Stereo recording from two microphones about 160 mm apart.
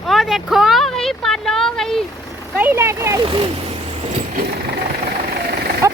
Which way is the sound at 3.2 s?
30° right (ahead or behind).